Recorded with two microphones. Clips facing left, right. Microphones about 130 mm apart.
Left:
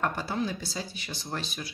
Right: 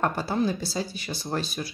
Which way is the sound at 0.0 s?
35° right (ahead or behind).